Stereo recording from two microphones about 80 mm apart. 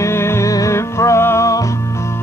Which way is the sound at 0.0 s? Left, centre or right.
Left.